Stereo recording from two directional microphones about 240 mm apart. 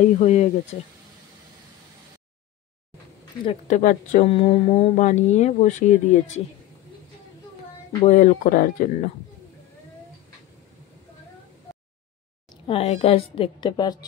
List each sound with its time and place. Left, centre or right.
0.2 s speech: left
3.4 s speech: left
8.0 s speech: left
12.6 s speech: left